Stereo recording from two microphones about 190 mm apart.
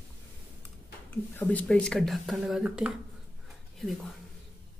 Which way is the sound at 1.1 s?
10° left (ahead or behind).